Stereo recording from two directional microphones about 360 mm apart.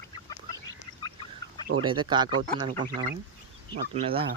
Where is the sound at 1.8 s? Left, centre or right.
Centre.